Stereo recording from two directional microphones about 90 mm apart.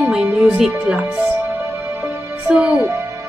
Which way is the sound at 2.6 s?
30° right (ahead or behind).